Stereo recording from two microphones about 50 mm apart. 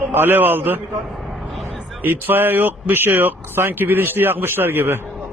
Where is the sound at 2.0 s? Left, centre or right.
Right.